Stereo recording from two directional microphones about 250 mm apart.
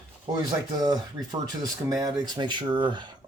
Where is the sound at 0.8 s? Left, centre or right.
Centre.